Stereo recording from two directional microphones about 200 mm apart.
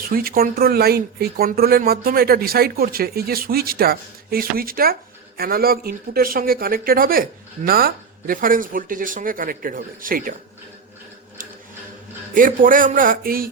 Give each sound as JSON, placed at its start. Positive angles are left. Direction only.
{"t": 0.0, "sound": "speech", "side_deg": -45}
{"t": 12.3, "sound": "speech", "side_deg": -40}